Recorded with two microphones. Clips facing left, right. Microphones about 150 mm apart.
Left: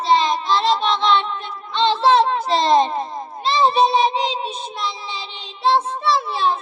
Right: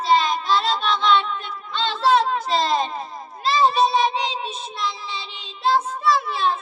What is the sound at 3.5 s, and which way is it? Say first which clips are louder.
Child singing: left 2 dB; 30° left (ahead or behind).